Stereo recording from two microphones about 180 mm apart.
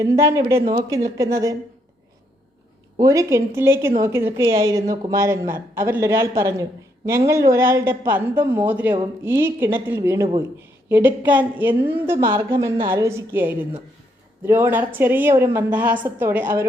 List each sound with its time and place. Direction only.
0.0 s a woman's voice: 15° right (ahead or behind)
3.0 s a woman's voice: 20° right (ahead or behind)
12.1 s a woman's voice: 30° right (ahead or behind)
12.4 s a woman's voice: 15° right (ahead or behind)
13.1 s a woman's voice: 15° right (ahead or behind)